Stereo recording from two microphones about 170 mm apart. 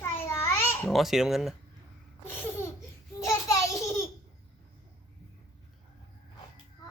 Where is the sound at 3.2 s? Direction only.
20° left (ahead or behind).